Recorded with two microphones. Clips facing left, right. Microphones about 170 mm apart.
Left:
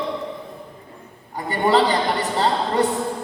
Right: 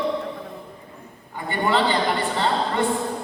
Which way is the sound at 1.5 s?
40° left (ahead or behind).